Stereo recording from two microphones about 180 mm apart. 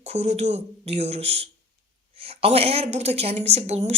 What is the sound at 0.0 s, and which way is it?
Speech, 40° right (ahead or behind).